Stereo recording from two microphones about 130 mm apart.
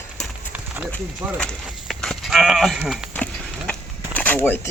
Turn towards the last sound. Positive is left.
turn(degrees=15)  # may be behind; listen again after turning